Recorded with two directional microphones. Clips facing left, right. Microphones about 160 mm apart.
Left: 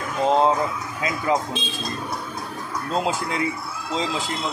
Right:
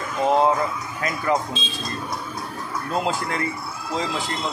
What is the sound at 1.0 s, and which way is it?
Speech, 15° left (ahead or behind).